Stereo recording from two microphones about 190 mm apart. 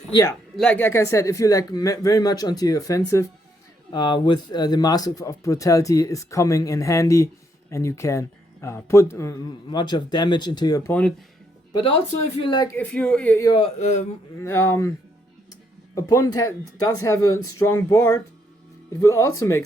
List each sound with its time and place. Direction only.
0.1 s speech: 20° left (ahead or behind)
0.5 s speech: 5° left (ahead or behind)
12.4 s speech: 25° left (ahead or behind)
12.7 s speech: 5° left (ahead or behind)
13.5 s speech: 30° left (ahead or behind)
14.3 s speech: 15° left (ahead or behind)
16.0 s speech: 15° left (ahead or behind)